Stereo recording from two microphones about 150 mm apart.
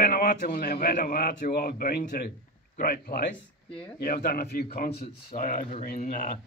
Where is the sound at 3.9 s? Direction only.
90° left.